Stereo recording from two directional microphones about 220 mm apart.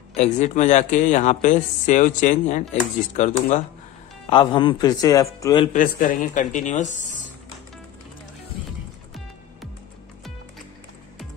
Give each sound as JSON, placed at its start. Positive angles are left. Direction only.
{"t": 0.1, "sound": "speech", "side_deg": 30}
{"t": 4.3, "sound": "a man's voice", "side_deg": 20}
{"t": 5.7, "sound": "speech", "side_deg": 35}